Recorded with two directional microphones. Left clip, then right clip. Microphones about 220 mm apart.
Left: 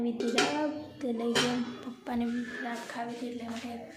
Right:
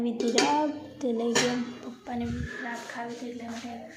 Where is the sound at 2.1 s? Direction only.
30° left (ahead or behind).